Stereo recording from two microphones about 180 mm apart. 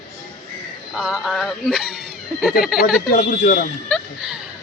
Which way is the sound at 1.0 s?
Centre (ahead or behind).